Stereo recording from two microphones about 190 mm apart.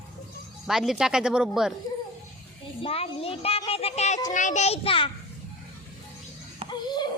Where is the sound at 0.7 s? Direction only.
Centre (ahead or behind).